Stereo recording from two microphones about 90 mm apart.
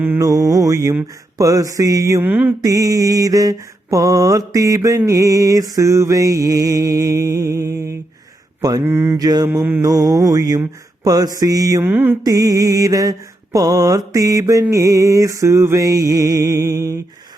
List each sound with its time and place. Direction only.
0.2 s mantra: 40° right (ahead or behind)
2.2 s mantra: 20° right (ahead or behind)
2.6 s mantra: 40° right (ahead or behind)
8.8 s mantra: 25° right (ahead or behind)
9.1 s music: 45° right (ahead or behind)
9.5 s mantra: 25° right (ahead or behind)
9.8 s music: 45° right (ahead or behind)
11.8 s mantra: 25° right (ahead or behind)
12.2 s mantra: 45° right (ahead or behind)